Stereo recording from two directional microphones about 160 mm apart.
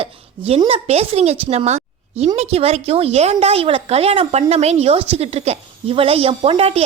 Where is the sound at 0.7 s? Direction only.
40° right (ahead or behind).